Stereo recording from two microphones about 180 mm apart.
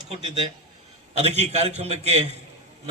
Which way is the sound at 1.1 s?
35° right (ahead or behind).